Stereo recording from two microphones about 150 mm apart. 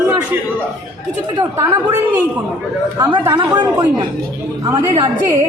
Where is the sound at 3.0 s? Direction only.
30° right (ahead or behind).